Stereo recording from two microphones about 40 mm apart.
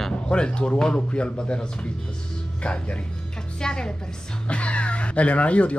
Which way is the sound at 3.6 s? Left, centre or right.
Left.